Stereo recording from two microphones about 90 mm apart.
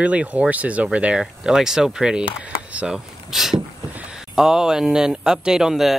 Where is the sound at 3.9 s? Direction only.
10° right (ahead or behind).